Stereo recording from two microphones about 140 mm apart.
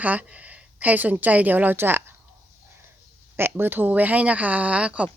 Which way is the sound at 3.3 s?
15° right (ahead or behind).